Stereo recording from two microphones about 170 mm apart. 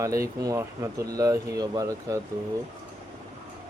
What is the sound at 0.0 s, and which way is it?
Speech, 20° right (ahead or behind).